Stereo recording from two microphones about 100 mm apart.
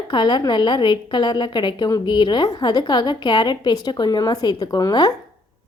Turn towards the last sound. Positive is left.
turn(degrees=45)  # may be behind; listen again after turning